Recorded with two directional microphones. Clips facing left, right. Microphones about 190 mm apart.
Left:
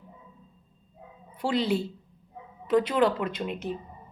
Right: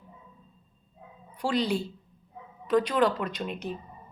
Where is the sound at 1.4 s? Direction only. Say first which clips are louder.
Left 1 dB; 25° left (ahead or behind).